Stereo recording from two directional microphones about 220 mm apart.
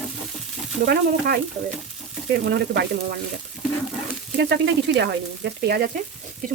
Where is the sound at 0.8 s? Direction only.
45° right (ahead or behind).